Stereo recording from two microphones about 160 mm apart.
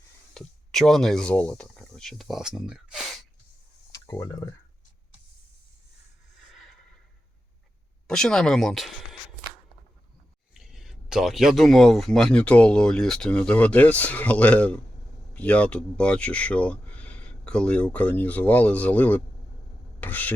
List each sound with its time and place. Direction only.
0.3 s speech: centre (ahead or behind)
3.9 s speech: 20° left (ahead or behind)
6.5 s a sound: centre (ahead or behind)
8.0 s speech: 5° left (ahead or behind)
10.5 s speech: centre (ahead or behind)